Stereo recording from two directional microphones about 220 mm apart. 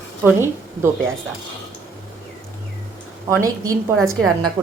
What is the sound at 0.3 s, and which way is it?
Speech, 10° right (ahead or behind).